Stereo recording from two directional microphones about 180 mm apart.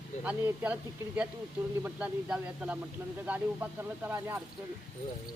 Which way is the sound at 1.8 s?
5° right (ahead or behind).